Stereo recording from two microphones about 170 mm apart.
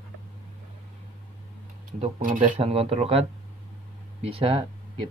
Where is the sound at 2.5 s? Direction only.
35° right (ahead or behind).